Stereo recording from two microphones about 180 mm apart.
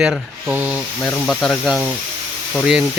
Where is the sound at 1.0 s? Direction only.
Centre (ahead or behind).